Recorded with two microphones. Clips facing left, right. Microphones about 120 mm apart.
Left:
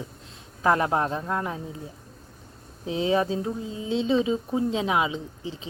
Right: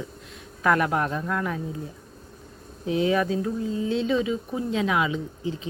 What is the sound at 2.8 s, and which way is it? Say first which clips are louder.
Speech: right 1 dB; 25° left (ahead or behind).